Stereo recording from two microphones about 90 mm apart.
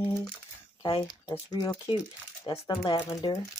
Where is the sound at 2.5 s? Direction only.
65° left (ahead or behind).